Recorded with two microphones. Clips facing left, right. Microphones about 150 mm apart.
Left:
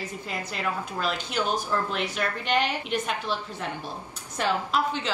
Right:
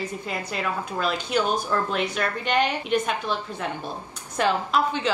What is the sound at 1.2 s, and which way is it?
Speech, 15° right (ahead or behind).